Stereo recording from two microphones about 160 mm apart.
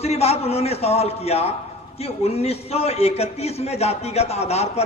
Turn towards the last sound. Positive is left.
turn(degrees=40)  # may be behind; listen again after turning